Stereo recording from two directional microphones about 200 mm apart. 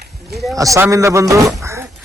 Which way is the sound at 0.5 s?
15° right (ahead or behind).